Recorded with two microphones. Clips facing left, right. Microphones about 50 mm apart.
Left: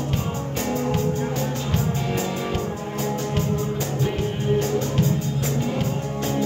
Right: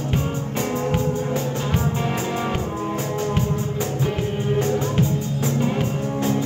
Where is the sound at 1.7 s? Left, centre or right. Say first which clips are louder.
Right 1 dB; right.